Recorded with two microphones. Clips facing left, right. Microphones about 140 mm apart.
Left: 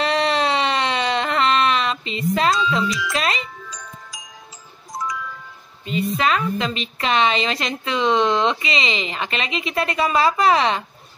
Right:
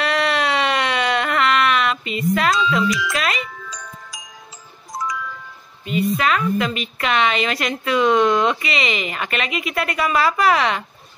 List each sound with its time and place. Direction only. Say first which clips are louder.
0.0 s a sound: left 1 dB; 30° left (ahead or behind)
3.1 s a woman's voice: even; 30° left (ahead or behind)
5.9 s a woman's voice: right 1 dB; 30° left (ahead or behind)